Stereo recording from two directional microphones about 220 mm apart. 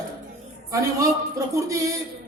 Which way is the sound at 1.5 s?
15° right (ahead or behind).